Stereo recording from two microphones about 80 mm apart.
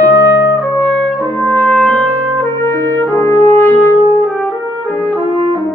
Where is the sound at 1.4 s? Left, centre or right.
Left.